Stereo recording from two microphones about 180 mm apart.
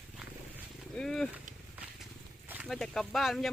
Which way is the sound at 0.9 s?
5° left (ahead or behind).